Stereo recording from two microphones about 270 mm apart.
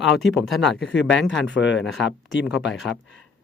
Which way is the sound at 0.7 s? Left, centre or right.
Left.